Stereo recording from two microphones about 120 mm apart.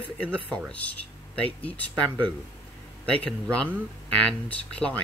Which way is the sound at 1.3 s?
15° left (ahead or behind).